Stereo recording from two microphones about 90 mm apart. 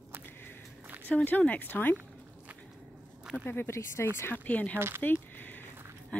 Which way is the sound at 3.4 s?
25° left (ahead or behind).